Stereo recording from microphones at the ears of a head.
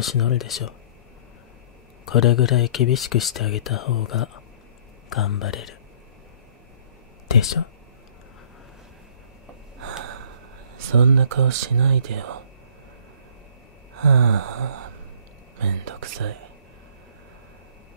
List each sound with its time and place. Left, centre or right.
0.0 s speech: left
2.0 s speech: left
7.2 s speech: left
9.8 s snort: right
10.8 s speech: right
13.9 s a sound: right
15.5 s speech: right